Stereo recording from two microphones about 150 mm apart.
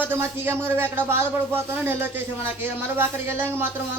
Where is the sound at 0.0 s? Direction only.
15° right (ahead or behind).